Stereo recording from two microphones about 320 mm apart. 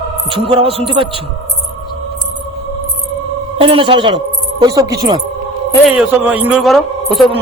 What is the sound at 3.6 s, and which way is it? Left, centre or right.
A woman's voice, centre.